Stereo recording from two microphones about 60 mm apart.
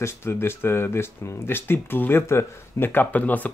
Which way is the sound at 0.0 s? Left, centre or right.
Left.